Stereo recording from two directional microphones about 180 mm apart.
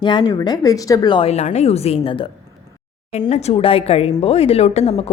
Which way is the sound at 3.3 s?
35° left (ahead or behind).